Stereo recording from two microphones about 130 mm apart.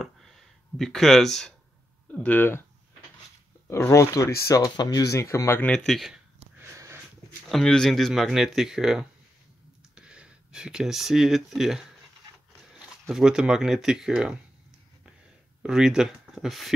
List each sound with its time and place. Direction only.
0.0 s a sound: centre (ahead or behind)
2.0 s speech: 10° left (ahead or behind)
3.6 s speech: 20° left (ahead or behind)
5.6 s speech: 5° left (ahead or behind)
6.6 s sniff: 20° right (ahead or behind)
7.4 s speech: 5° left (ahead or behind)
13.1 s speech: 5° right (ahead or behind)
15.6 s speech: 5° right (ahead or behind)